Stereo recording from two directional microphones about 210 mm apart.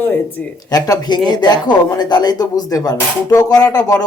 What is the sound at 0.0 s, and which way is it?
A man's voice, 10° left (ahead or behind).